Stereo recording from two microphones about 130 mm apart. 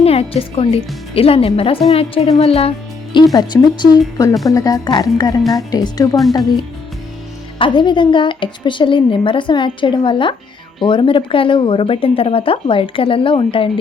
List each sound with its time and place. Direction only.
0.0 s a woman's voice: 50° left (ahead or behind); by 6.1 s 30° left (ahead or behind)
7.6 s a woman's voice: 35° left (ahead or behind)